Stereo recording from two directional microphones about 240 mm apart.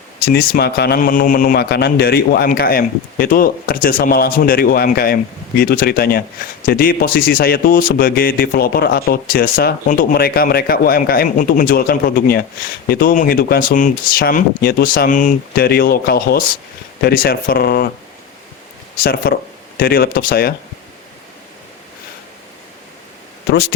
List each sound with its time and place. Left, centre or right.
0.3 s a man's voice: left
19.2 s a man's voice: left